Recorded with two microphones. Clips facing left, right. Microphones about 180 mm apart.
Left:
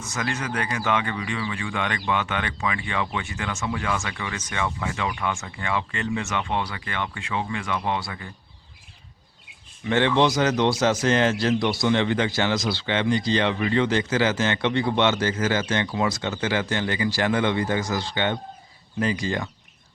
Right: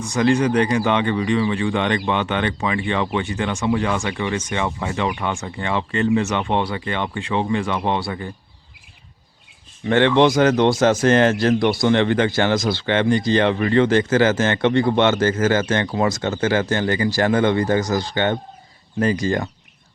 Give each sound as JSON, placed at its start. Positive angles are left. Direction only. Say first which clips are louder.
{"t": 0.1, "sound": "speech", "louder": "right 12 dB", "side_deg": -30}
{"t": 9.9, "sound": "speech", "louder": "right 5 dB", "side_deg": -60}